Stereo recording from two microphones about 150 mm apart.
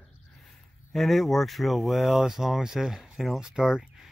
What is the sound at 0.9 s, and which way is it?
Speech, centre (ahead or behind).